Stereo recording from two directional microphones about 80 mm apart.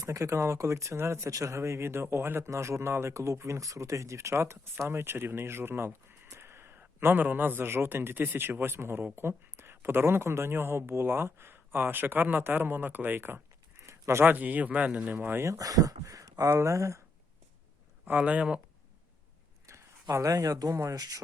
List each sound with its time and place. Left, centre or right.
0.0 s speech: right
13.9 s a sound: right
14.3 s speech: right
15.5 s speech: right
18.0 s speech: centre
20.1 s speech: right